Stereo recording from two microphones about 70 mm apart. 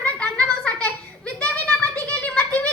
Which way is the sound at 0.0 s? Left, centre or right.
Left.